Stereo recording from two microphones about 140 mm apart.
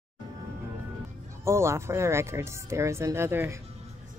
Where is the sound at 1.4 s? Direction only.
20° right (ahead or behind).